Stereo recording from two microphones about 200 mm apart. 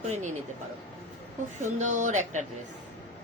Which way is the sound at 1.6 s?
40° right (ahead or behind).